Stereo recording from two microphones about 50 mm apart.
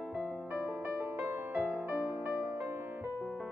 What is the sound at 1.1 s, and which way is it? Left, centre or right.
Music, right.